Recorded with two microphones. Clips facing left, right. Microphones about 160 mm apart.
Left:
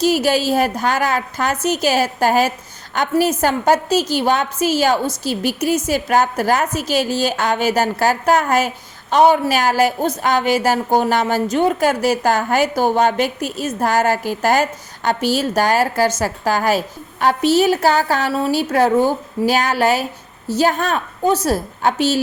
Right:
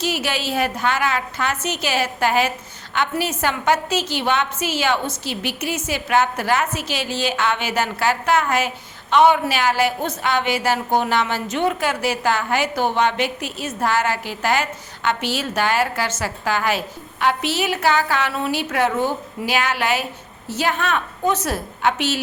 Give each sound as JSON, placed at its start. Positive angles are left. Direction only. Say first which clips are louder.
{"t": 0.0, "sound": "a woman's voice", "louder": "left 8 dB", "side_deg": 40}